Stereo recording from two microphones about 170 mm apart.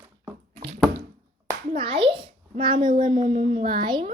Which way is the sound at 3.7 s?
25° right (ahead or behind).